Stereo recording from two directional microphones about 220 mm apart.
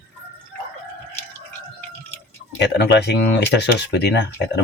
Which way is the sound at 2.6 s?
50° left (ahead or behind).